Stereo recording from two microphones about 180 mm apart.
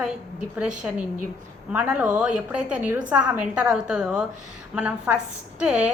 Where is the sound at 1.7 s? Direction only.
10° right (ahead or behind).